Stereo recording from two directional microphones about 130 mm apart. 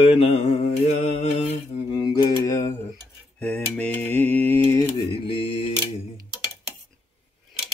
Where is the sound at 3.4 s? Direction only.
10° left (ahead or behind).